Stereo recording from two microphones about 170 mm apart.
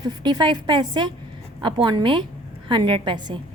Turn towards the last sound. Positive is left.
turn(degrees=-25)  # may be behind; listen again after turning